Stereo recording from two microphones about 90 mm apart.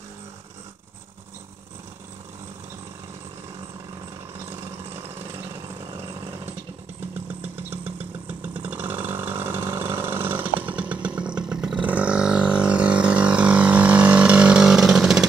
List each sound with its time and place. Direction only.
7.5 s vehicle: 20° right (ahead or behind); by 15.2 s 5° right (ahead or behind)